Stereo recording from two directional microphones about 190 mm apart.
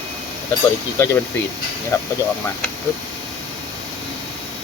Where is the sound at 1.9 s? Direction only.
15° left (ahead or behind).